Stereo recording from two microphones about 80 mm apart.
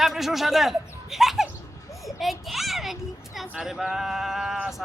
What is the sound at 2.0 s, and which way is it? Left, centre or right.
Children playing, centre.